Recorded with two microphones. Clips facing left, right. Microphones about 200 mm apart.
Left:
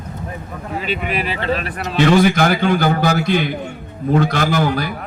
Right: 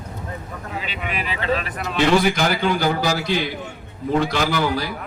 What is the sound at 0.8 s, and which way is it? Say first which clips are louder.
A man's voice: left 7 dB; 50° left (ahead or behind).